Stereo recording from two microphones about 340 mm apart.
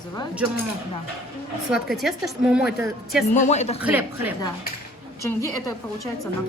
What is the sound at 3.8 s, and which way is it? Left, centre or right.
Speech, centre.